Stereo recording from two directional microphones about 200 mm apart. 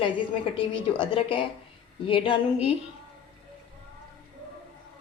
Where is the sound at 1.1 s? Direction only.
25° left (ahead or behind).